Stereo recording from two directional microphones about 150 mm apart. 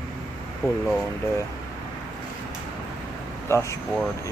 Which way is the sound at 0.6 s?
20° left (ahead or behind).